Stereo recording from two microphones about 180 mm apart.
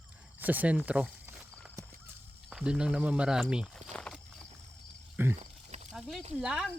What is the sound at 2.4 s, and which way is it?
Speech, 5° right (ahead or behind).